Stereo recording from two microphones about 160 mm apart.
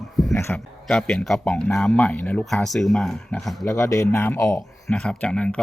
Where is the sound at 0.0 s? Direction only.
Centre (ahead or behind).